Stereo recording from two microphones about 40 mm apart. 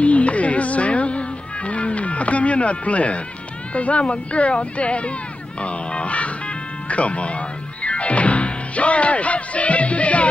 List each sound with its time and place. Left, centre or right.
0.0 s music: left
3.7 s speech: left
6.9 s music: left